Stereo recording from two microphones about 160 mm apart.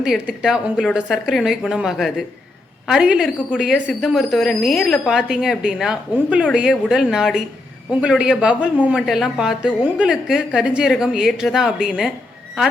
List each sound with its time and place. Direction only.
0.0 s a woman's voice: 5° right (ahead or behind)